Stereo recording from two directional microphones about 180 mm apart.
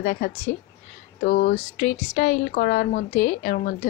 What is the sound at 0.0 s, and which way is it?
A woman's voice, 60° left (ahead or behind).